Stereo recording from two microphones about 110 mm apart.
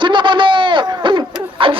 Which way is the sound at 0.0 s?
45° right (ahead or behind).